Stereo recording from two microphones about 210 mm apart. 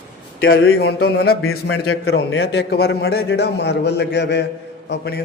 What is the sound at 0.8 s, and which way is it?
Speech, 50° left (ahead or behind).